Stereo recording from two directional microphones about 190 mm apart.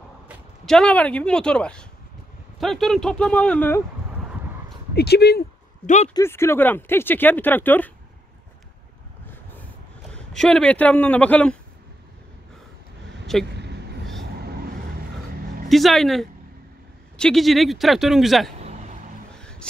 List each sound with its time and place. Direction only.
0.7 s speech: 5° left (ahead or behind)
4.9 s speech: 55° left (ahead or behind)
5.9 s speech: 35° left (ahead or behind)
6.1 s speech: 15° left (ahead or behind)
10.1 s speech: 5° left (ahead or behind)
13.3 s speech: centre (ahead or behind)
14.2 s vehicle: 55° right (ahead or behind)
15.7 s speech: centre (ahead or behind)
18.6 s vehicle: 35° right (ahead or behind)
19.3 s vehicle: 5° left (ahead or behind)